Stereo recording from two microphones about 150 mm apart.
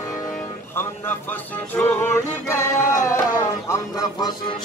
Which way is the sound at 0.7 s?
15° left (ahead or behind).